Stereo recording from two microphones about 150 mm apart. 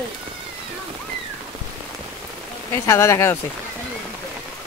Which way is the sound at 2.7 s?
20° left (ahead or behind).